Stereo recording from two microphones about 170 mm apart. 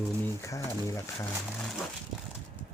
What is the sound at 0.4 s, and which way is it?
Speech, 15° left (ahead or behind).